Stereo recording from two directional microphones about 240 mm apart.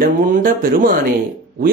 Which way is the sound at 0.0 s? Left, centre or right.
Right.